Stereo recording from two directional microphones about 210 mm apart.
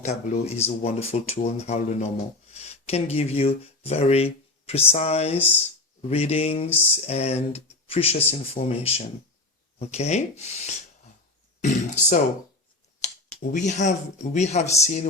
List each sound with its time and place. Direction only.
0.0 s speech: 30° left (ahead or behind)
6.7 s a sound: 10° left (ahead or behind)
6.9 s speech: 30° left (ahead or behind)
13.4 s speech: 35° left (ahead or behind)